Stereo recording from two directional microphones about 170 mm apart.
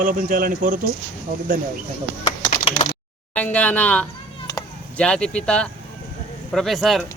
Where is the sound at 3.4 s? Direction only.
10° left (ahead or behind).